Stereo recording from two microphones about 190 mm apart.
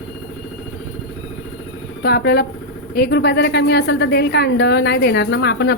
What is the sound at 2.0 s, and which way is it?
A woman's voice, 55° left (ahead or behind).